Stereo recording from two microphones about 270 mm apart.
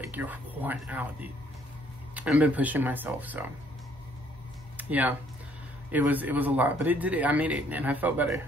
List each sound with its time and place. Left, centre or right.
0.1 s a man's voice: centre
4.7 s a sound: centre
5.9 s a man's voice: centre